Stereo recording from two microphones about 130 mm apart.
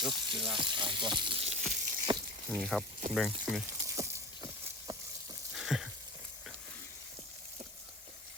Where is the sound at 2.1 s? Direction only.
35° right (ahead or behind).